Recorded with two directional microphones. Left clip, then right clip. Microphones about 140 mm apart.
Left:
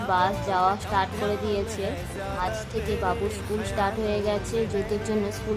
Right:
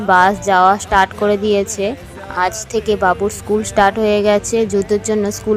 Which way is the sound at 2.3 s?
70° right (ahead or behind).